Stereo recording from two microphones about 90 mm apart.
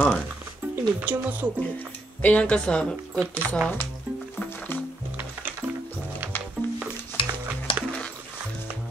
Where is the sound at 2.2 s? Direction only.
15° left (ahead or behind).